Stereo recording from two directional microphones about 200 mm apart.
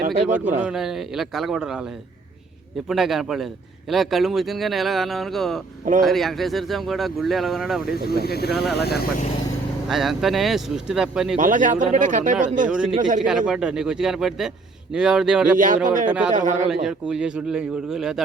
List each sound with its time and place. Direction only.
0.3 s speech: 10° right (ahead or behind)
2.9 s speech: centre (ahead or behind)
8.0 s speech: 50° left (ahead or behind)
8.5 s speech: centre (ahead or behind)
8.8 s speech: 50° left (ahead or behind)
9.9 s speech: centre (ahead or behind)
11.3 s speech: 40° right (ahead or behind)
12.7 s speech: 5° right (ahead or behind)
15.5 s speech: 40° right (ahead or behind)
16.6 s speech: 5° right (ahead or behind)